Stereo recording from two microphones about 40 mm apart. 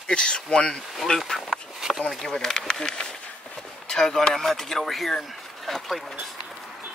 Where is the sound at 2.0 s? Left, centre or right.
Centre.